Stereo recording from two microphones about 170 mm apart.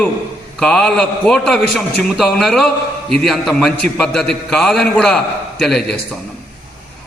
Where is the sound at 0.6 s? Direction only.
5° left (ahead or behind).